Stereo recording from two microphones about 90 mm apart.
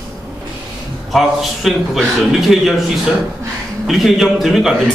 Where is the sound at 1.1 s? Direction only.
Centre (ahead or behind).